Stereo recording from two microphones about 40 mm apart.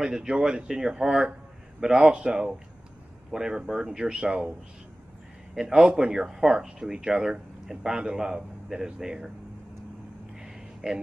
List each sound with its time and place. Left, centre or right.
0.0 s speech: centre
5.5 s speech: centre
10.4 s a sound: centre